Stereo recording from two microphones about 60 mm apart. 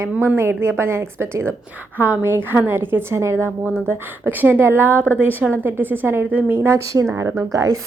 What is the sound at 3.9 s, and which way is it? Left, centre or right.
A woman's voice, right.